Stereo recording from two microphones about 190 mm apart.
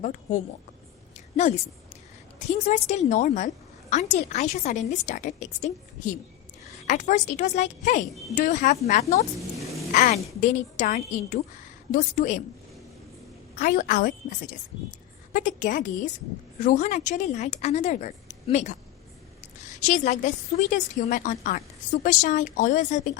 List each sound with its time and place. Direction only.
0.0 s a woman's voice: 40° left (ahead or behind)
1.1 s a sound: 40° left (ahead or behind)
2.5 s a woman's voice: 35° left (ahead or behind)
6.8 s a woman's voice: 40° left (ahead or behind)
13.6 s a woman's voice: 45° left (ahead or behind)